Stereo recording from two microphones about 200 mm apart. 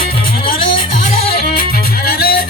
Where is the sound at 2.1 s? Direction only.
50° left (ahead or behind).